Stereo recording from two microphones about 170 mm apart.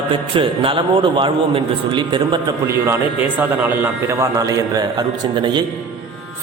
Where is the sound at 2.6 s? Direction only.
15° right (ahead or behind).